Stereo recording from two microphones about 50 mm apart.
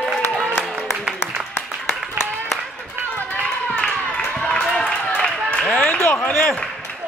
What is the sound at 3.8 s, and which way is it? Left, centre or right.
Clapping, left.